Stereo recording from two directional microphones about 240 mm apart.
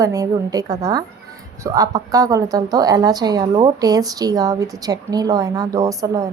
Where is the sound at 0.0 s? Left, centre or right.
Centre.